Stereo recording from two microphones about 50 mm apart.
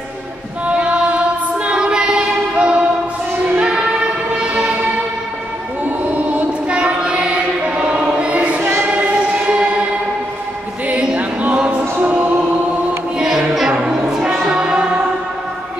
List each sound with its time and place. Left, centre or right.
0.7 s female singing: right
2.5 s music: right
5.9 s choir: right
10.9 s choir: right
12.0 s music: right
13.7 s a sound: centre
14.4 s music: centre